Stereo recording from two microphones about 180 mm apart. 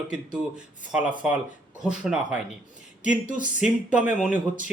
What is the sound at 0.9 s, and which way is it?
Speech, 5° right (ahead or behind).